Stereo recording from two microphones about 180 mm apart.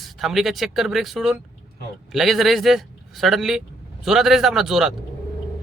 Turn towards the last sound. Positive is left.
turn(degrees=0)  # may be behind; listen again after turning